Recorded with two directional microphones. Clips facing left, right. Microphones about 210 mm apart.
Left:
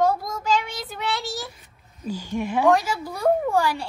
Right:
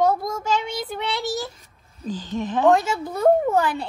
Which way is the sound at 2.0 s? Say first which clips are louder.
Even; 10° left (ahead or behind).